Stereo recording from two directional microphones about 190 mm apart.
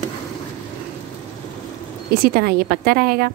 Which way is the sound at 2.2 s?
50° right (ahead or behind).